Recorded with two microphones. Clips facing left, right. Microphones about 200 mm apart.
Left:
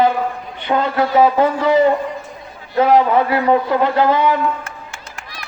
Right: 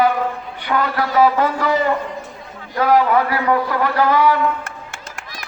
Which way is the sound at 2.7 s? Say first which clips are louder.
Left 2 dB; 20° left (ahead or behind).